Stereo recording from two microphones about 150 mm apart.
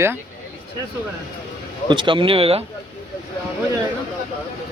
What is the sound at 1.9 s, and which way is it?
Speech, 35° right (ahead or behind).